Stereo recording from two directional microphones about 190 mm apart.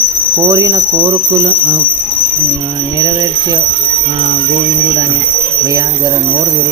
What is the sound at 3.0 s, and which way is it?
Speech, 20° right (ahead or behind).